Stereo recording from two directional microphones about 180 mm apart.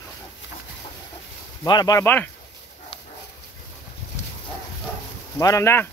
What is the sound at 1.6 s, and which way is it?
Speech, 20° left (ahead or behind).